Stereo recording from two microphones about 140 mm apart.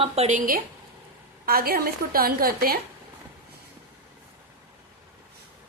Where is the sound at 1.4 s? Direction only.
90° right.